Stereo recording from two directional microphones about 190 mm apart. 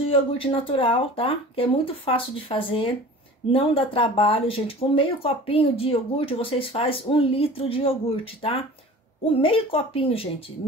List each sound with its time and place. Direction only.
0.1 s speech: 30° left (ahead or behind)